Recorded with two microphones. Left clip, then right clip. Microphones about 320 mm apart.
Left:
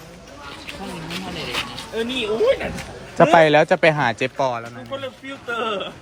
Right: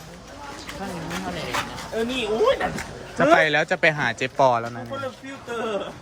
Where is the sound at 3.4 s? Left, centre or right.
Centre.